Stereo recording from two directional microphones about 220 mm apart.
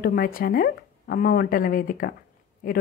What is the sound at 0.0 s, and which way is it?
Speech, 40° left (ahead or behind).